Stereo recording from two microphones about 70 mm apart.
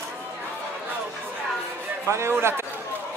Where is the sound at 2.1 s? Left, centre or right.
Right.